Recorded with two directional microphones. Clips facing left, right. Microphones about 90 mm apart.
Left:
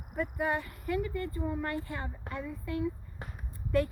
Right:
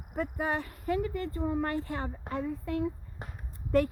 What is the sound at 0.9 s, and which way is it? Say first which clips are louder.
A woman's voice: right 2 dB; 40° right (ahead or behind).